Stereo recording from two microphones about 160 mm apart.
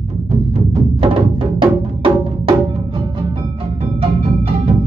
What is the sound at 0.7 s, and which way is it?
Music, 30° right (ahead or behind).